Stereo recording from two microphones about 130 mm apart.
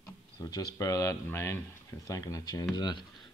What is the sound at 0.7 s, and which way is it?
Speech, 25° left (ahead or behind).